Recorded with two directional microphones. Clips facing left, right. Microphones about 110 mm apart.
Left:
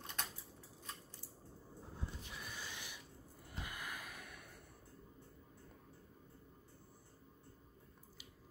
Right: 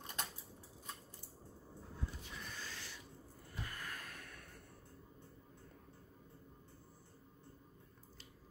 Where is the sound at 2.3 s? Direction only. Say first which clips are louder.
Even; 10° left (ahead or behind).